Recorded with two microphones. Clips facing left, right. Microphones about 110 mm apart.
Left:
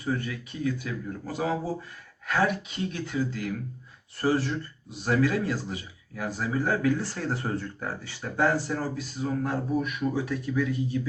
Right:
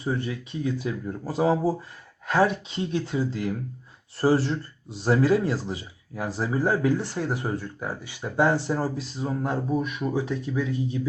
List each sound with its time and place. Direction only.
0.0 s speech: 25° right (ahead or behind)